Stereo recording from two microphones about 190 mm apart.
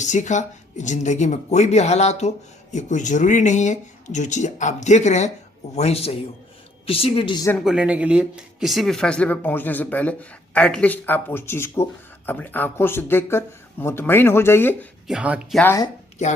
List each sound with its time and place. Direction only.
0.0 s speech: 40° left (ahead or behind); by 7.5 s 25° left (ahead or behind)
7.6 s speech: 5° right (ahead or behind)
15.0 s speech: 5° right (ahead or behind)
15.6 s speech: 15° left (ahead or behind)